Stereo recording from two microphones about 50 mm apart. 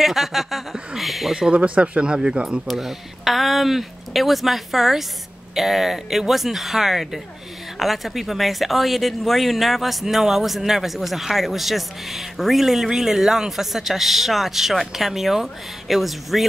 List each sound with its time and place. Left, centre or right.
0.0 s a sound: centre
1.5 s speech: right
2.7 s speech: centre